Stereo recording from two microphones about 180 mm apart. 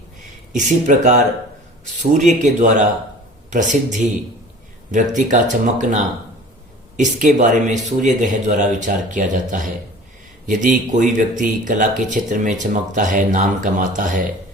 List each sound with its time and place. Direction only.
0.5 s speech: 45° right (ahead or behind)